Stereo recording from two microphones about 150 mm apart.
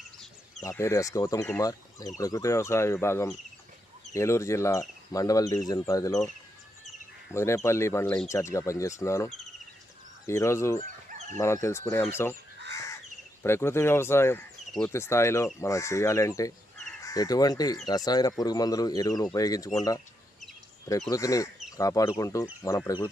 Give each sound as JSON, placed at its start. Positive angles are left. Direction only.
{"t": 0.6, "sound": "speech", "side_deg": 20}
{"t": 7.3, "sound": "speech", "side_deg": 20}
{"t": 11.1, "sound": "chicken", "side_deg": -50}
{"t": 11.3, "sound": "speech", "side_deg": 20}
{"t": 13.4, "sound": "speech", "side_deg": 15}
{"t": 21.1, "sound": "speech", "side_deg": 20}